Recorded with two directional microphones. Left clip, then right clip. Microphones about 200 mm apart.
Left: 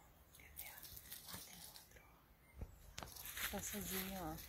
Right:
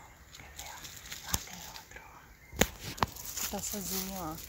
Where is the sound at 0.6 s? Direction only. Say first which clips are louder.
Right 12 dB; 20° right (ahead or behind).